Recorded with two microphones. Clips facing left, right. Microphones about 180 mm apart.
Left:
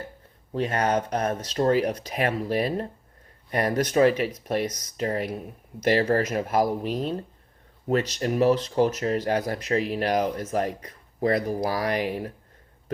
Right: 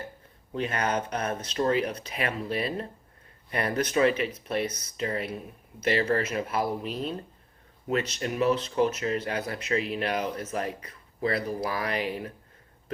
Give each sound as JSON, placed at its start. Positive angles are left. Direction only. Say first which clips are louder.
{"t": 0.5, "sound": "speech", "louder": "left 4 dB", "side_deg": 40}